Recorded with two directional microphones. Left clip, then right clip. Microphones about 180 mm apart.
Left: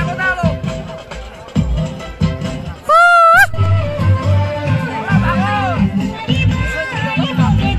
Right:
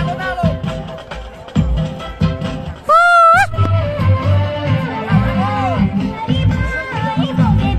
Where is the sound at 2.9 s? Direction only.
Centre (ahead or behind).